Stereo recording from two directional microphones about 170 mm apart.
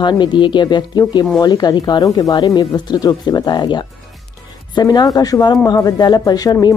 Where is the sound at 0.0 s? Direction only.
25° left (ahead or behind).